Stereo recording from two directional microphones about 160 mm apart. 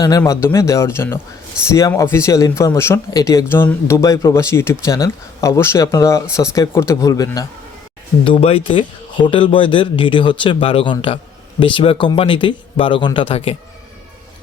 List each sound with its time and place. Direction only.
0.0 s speech: 20° left (ahead or behind)
8.2 s speech: 35° left (ahead or behind)